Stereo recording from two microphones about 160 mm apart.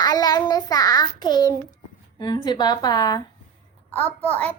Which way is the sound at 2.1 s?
30° left (ahead or behind).